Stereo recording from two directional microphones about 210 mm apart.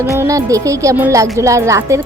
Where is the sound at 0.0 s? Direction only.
15° right (ahead or behind).